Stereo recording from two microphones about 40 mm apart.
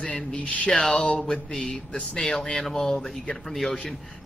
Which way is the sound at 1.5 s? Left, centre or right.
Centre.